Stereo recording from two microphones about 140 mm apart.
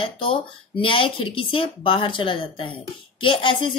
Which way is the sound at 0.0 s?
40° left (ahead or behind).